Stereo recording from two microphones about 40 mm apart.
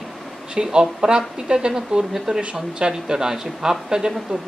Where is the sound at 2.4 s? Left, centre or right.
Right.